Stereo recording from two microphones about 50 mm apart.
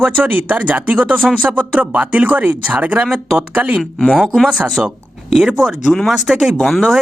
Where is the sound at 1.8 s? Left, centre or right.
Right.